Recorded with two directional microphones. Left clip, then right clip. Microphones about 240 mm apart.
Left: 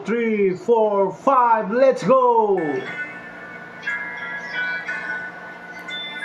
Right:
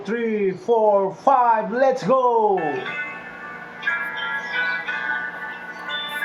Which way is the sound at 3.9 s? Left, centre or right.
Right.